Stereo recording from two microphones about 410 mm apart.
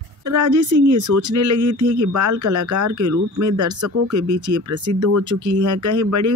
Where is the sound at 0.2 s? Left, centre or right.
Right.